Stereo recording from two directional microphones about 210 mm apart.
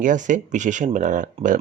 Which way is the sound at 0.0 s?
40° right (ahead or behind).